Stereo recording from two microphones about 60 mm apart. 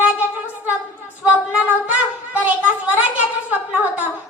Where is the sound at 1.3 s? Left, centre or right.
Right.